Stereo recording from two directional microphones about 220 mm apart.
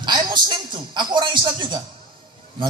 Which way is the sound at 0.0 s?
20° right (ahead or behind).